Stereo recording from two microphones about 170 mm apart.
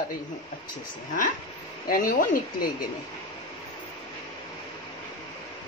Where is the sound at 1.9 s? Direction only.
55° left (ahead or behind).